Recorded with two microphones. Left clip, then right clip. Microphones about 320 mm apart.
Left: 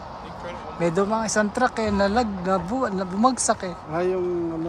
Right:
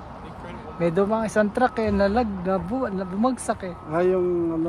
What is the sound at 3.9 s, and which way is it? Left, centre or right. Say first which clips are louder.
Speech: right 3 dB; right.